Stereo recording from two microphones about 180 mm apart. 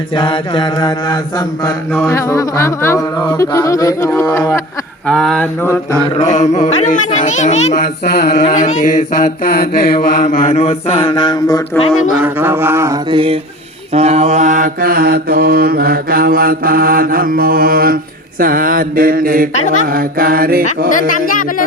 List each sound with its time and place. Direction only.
0.1 s mantra: 25° left (ahead or behind)
2.0 s speech: 15° left (ahead or behind)
5.0 s a sound: 5° left (ahead or behind)
5.6 s speech: 15° left (ahead or behind)
6.1 s mantra: 40° left (ahead or behind)
8.0 s mantra: 60° left (ahead or behind)
8.4 s mantra: 45° left (ahead or behind); by 11.6 s 25° left (ahead or behind)
12.2 s a sound: 10° right (ahead or behind)
13.1 s a sound: 30° right (ahead or behind)
13.9 s mantra: 35° right (ahead or behind); by 20.7 s 55° right (ahead or behind)
21.1 s mantra: 50° left (ahead or behind)